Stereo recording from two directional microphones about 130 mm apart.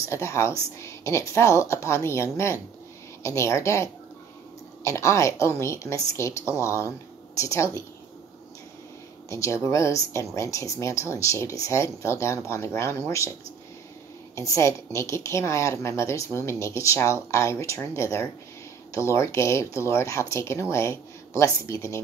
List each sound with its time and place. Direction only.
0.1 s a woman's voice: 20° left (ahead or behind)
9.3 s a woman's voice: 25° left (ahead or behind)
14.3 s a woman's voice: 25° left (ahead or behind)